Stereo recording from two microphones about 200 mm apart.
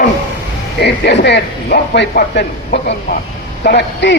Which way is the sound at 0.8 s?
55° left (ahead or behind).